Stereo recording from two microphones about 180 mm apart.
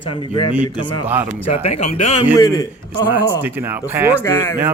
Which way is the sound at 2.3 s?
20° left (ahead or behind).